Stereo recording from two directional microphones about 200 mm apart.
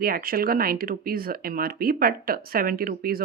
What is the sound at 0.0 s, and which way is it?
Speech, 45° right (ahead or behind).